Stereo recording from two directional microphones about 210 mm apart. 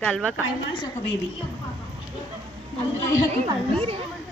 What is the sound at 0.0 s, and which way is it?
Speech, 5° left (ahead or behind).